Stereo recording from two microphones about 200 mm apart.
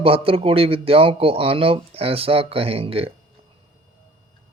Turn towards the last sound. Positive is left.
turn(degrees=-30)  # may be behind; listen again after turning